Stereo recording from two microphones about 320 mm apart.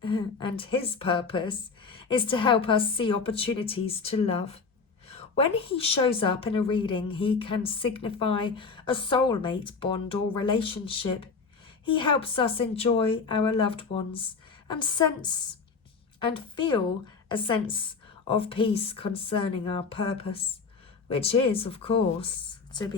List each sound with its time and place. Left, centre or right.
0.0 s a woman's voice: centre